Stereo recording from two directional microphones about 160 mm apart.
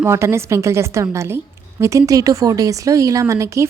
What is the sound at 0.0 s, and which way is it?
Speech, 15° right (ahead or behind).